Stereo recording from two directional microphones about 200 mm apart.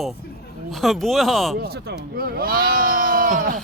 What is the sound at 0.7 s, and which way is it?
Speech, centre (ahead or behind).